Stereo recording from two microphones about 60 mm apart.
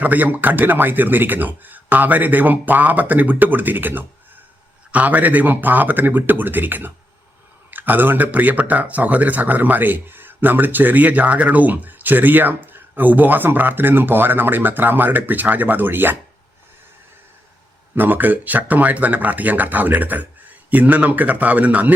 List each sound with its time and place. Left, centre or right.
0.0 s speech: right
17.9 s speech: right